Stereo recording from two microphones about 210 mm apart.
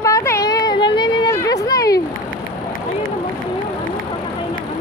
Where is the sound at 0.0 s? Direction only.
15° left (ahead or behind).